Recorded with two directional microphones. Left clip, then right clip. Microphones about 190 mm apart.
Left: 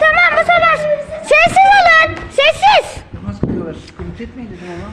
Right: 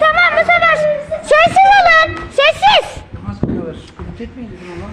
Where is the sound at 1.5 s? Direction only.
15° left (ahead or behind).